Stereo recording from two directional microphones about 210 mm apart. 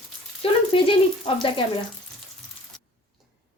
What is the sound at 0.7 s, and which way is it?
Speech, 25° left (ahead or behind).